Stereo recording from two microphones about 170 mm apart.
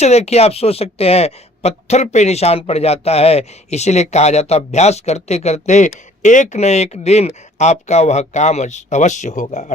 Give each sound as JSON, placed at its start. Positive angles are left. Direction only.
{"t": 0.0, "sound": "speech", "side_deg": 40}